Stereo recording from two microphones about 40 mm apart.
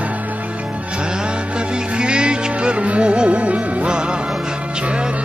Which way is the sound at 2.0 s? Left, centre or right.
Right.